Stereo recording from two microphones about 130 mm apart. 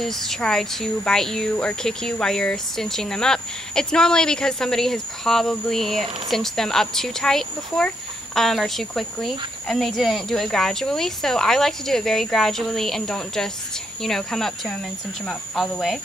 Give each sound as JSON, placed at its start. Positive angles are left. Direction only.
{"t": 0.0, "sound": "speech", "side_deg": 0}